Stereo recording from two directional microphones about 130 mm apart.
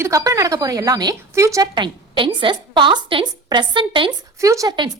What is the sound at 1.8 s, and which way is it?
A woman's voice, 40° right (ahead or behind).